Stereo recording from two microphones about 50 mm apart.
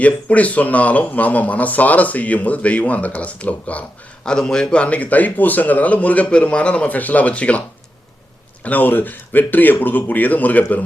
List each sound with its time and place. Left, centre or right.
0.0 s a man's voice: left
4.3 s a man's voice: centre
8.6 s speech: left